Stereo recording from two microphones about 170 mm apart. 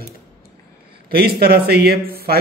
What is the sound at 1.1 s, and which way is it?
Speech, 65° right (ahead or behind).